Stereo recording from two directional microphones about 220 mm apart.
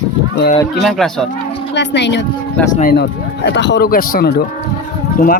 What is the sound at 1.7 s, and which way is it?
Speech, 55° left (ahead or behind).